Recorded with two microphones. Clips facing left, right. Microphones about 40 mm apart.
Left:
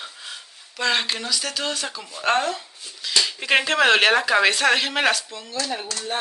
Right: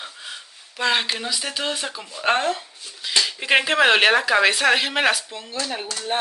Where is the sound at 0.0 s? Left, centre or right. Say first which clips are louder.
Right 1 dB; centre.